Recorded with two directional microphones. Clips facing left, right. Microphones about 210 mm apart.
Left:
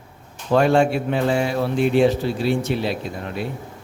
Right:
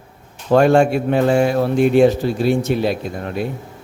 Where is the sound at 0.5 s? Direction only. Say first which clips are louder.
Right 4 dB; 45° right (ahead or behind).